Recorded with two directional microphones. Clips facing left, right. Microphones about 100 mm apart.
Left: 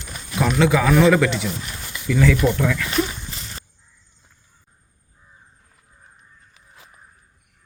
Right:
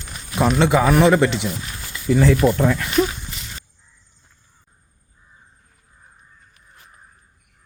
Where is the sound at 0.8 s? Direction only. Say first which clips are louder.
Right 1 dB; 25° right (ahead or behind).